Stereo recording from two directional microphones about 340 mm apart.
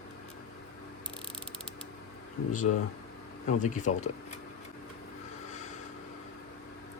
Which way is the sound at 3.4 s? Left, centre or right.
Left.